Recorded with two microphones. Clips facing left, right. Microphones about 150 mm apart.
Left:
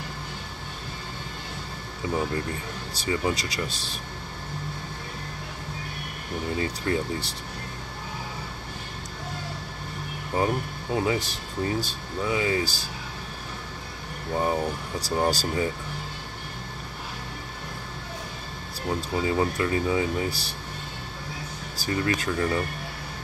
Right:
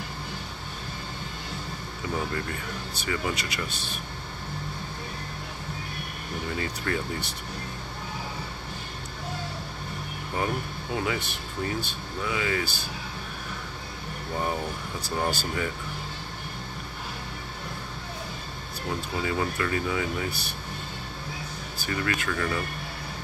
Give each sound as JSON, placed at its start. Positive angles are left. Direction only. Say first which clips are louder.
{"t": 2.9, "sound": "speech", "louder": "left 4 dB", "side_deg": 30}
{"t": 6.6, "sound": "speech", "louder": "left 4 dB", "side_deg": 30}
{"t": 10.3, "sound": "speech", "louder": "left 4 dB", "side_deg": 25}
{"t": 14.4, "sound": "speech", "louder": "left 4 dB", "side_deg": 20}
{"t": 15.0, "sound": "speech", "louder": "left 4 dB", "side_deg": 35}
{"t": 18.9, "sound": "speech", "louder": "left 4 dB", "side_deg": 25}
{"t": 21.7, "sound": "speech", "louder": "left 3 dB", "side_deg": 30}